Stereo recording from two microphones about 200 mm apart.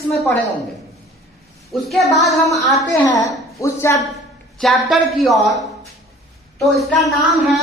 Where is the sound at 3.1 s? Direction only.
15° left (ahead or behind).